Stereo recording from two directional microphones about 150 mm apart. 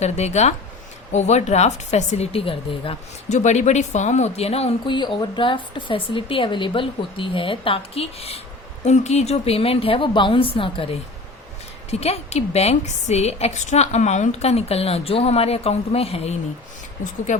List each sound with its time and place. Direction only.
0.0 s a woman's voice: 50° left (ahead or behind)
3.2 s a woman's voice: 50° left (ahead or behind)
4.9 s a woman's voice: 30° left (ahead or behind)